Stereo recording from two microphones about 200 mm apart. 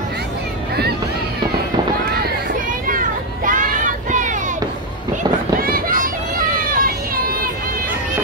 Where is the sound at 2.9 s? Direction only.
45° right (ahead or behind).